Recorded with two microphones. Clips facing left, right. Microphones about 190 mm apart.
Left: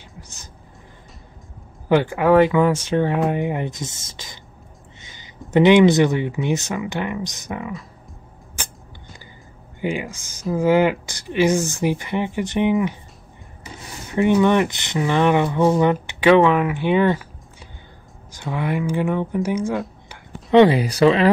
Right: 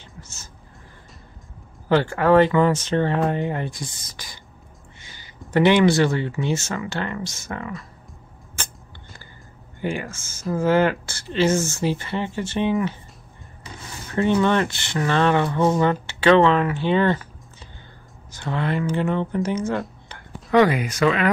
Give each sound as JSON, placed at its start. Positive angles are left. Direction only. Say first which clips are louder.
{"t": 0.2, "sound": "a sound", "louder": "even", "side_deg": 15}
{"t": 1.9, "sound": "speech", "louder": "left 1 dB", "side_deg": 15}
{"t": 5.0, "sound": "a sound", "louder": "left 1 dB", "side_deg": 20}
{"t": 5.5, "sound": "speech", "louder": "left 4 dB", "side_deg": 15}
{"t": 9.8, "sound": "speech", "louder": "left 2 dB", "side_deg": 15}
{"t": 14.0, "sound": "speech", "louder": "left 3 dB", "side_deg": 15}
{"t": 18.3, "sound": "speech", "louder": "left 1 dB", "side_deg": 10}
{"t": 19.7, "sound": "a sound", "louder": "left 1 dB", "side_deg": 0}
{"t": 20.5, "sound": "speech", "louder": "left 4 dB", "side_deg": 30}